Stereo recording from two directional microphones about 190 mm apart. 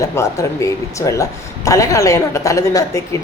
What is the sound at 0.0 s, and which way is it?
Speech, 15° left (ahead or behind).